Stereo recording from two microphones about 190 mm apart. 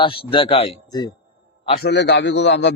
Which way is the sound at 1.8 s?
65° left (ahead or behind).